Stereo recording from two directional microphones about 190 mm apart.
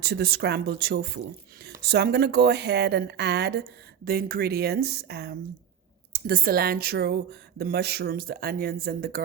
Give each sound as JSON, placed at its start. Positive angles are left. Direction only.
{"t": 0.0, "sound": "a woman's voice", "side_deg": -55}